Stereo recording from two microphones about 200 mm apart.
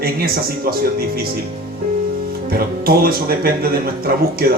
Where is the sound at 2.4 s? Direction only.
50° right (ahead or behind).